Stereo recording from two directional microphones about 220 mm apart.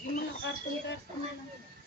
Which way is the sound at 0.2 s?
50° left (ahead or behind).